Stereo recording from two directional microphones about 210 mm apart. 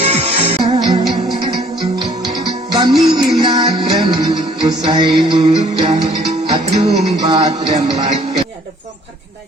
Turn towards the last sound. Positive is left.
turn(degrees=-25)  # may be behind; listen again after turning